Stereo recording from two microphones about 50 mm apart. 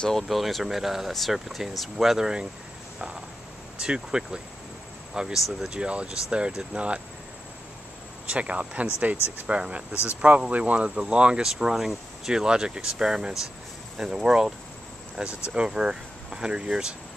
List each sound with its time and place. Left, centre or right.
0.3 s speech: centre
3.8 s speech: centre
8.3 s speech: right
11.5 s speech: centre